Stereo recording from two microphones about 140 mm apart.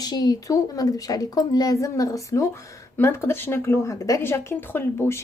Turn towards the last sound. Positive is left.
turn(degrees=15)  # may be behind; listen again after turning